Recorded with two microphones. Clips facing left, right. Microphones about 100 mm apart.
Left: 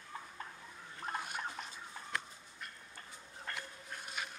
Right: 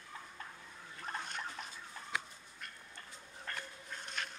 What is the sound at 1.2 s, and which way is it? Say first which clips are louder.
Bathtub: left 1 dB; 10° left (ahead or behind).